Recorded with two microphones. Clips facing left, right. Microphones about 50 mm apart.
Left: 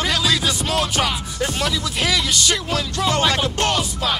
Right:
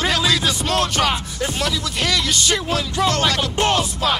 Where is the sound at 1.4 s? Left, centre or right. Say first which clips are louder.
Even; centre.